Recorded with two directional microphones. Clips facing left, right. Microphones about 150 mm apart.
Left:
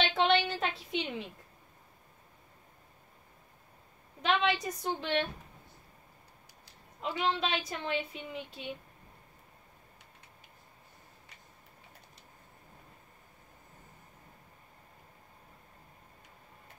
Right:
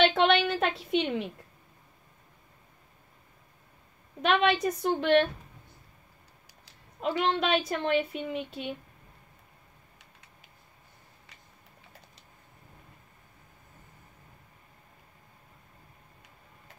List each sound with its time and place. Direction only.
0.0 s a sound: 65° right (ahead or behind)
4.2 s a woman's voice: 60° right (ahead or behind)
6.6 s a woman's voice: 60° right (ahead or behind)